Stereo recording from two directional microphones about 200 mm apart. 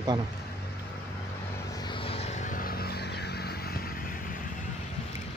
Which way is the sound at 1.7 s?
20° left (ahead or behind).